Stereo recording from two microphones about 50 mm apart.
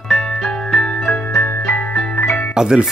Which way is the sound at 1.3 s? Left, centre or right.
Left.